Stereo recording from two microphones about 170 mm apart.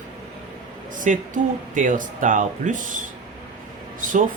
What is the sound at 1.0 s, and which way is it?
Speech, 50° right (ahead or behind).